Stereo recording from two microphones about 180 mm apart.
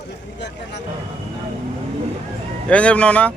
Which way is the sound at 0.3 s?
70° left (ahead or behind).